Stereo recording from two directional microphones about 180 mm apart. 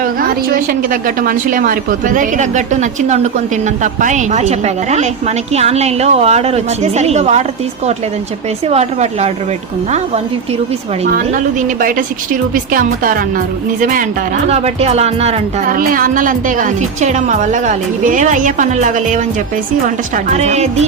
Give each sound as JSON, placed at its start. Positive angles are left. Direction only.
{"t": 0.0, "sound": "a woman's voice", "side_deg": -50}
{"t": 8.6, "sound": "a woman's voice", "side_deg": -35}
{"t": 11.8, "sound": "a woman's voice", "side_deg": -50}
{"t": 14.5, "sound": "a woman's voice", "side_deg": -35}
{"t": 15.7, "sound": "a woman's voice", "side_deg": -50}
{"t": 20.3, "sound": "a woman's voice", "side_deg": -40}